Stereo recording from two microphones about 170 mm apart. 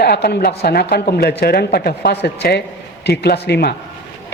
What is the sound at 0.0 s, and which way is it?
Speech, 70° left (ahead or behind).